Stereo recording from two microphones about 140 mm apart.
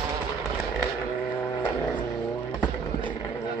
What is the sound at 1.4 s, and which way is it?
Vehicle, 10° left (ahead or behind).